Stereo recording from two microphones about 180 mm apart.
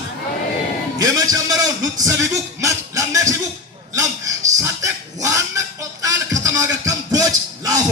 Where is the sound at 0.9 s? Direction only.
20° right (ahead or behind).